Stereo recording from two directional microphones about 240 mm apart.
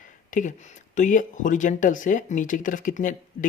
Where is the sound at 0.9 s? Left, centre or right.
Left.